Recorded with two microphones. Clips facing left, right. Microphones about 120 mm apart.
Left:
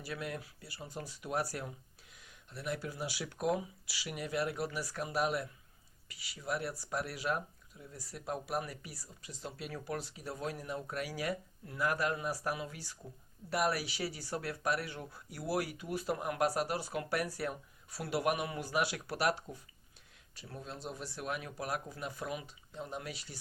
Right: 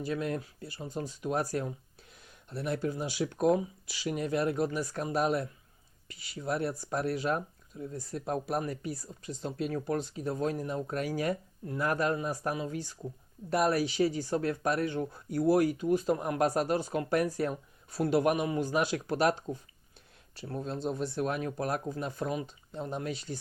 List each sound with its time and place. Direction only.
0.0 s speech: 25° right (ahead or behind)
2.5 s speech: 30° right (ahead or behind)
10.3 s speech: 35° right (ahead or behind)
10.9 s speech: 50° right (ahead or behind)
11.2 s speech: 30° right (ahead or behind)
19.0 s speech: 25° right (ahead or behind)
20.6 s speech: 30° right (ahead or behind)